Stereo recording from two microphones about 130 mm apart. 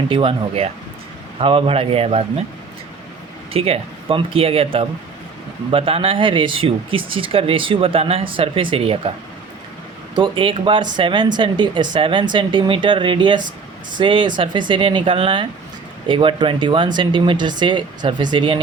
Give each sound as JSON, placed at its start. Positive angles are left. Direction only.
{"t": 0.1, "sound": "speech", "side_deg": -45}
{"t": 3.5, "sound": "speech", "side_deg": -45}
{"t": 10.2, "sound": "speech", "side_deg": -40}